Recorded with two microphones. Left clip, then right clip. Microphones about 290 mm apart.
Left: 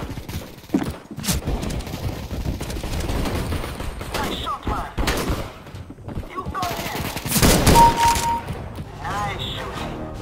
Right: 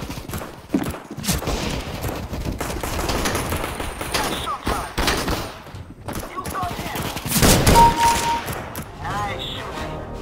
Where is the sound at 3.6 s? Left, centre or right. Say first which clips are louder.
Right 5 dB; centre.